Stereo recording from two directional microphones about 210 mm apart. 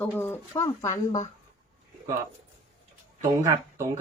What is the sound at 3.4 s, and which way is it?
Speech, 15° right (ahead or behind).